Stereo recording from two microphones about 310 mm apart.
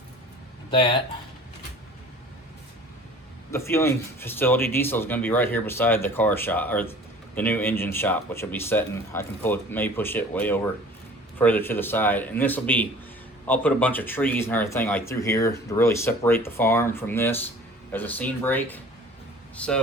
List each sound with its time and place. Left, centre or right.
0.7 s speech: centre
3.5 s a man's voice: centre